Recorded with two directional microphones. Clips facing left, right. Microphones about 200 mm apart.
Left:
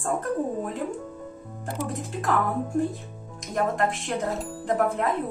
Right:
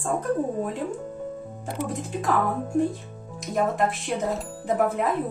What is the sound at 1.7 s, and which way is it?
Speech, centre (ahead or behind).